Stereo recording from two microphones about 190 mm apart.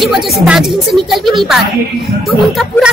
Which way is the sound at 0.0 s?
Centre (ahead or behind).